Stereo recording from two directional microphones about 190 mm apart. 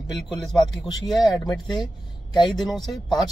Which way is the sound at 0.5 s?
Centre (ahead or behind).